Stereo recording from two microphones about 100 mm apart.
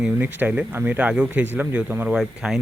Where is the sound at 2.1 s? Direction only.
5° right (ahead or behind).